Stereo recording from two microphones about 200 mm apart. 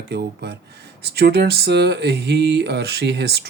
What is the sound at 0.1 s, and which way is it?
Speech, 55° right (ahead or behind).